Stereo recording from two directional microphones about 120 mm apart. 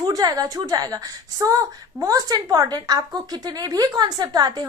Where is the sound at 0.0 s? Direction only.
30° right (ahead or behind).